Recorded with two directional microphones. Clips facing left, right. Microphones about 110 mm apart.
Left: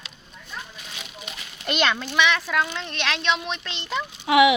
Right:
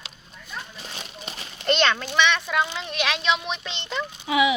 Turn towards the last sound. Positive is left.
turn(degrees=80)